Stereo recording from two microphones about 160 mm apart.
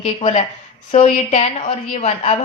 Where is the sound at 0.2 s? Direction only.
35° left (ahead or behind).